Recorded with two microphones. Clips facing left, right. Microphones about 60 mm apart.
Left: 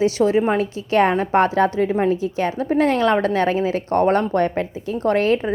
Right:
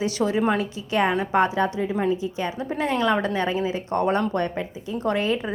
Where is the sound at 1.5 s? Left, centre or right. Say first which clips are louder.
Left 6 dB; left.